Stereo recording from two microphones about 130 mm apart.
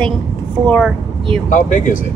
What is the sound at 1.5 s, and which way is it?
Speech, 75° left (ahead or behind).